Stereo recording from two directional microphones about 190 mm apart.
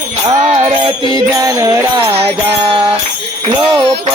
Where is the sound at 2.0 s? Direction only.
30° right (ahead or behind).